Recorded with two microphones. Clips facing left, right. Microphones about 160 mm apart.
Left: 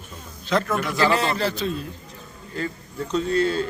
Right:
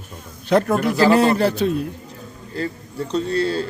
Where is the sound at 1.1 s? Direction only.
55° right (ahead or behind).